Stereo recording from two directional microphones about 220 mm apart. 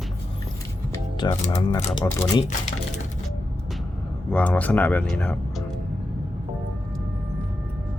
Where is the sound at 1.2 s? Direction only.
20° left (ahead or behind).